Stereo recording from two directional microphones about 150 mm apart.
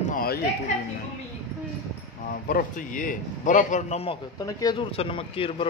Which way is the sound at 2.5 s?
60° left (ahead or behind).